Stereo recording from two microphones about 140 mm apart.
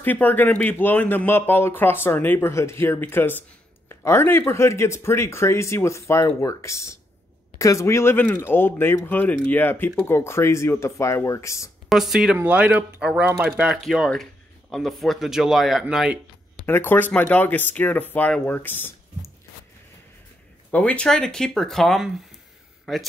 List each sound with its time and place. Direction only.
0.0 s speech: 10° left (ahead or behind)
11.9 s speech: centre (ahead or behind)
16.6 s speech: 15° left (ahead or behind)
20.7 s speech: 10° left (ahead or behind)